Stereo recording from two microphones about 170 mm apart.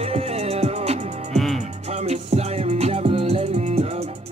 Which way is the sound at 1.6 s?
40° right (ahead or behind).